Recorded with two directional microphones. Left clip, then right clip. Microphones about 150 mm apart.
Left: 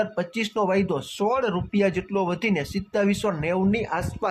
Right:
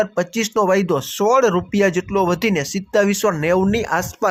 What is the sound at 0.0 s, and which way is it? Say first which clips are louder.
Speech: right 6 dB; 30° right (ahead or behind).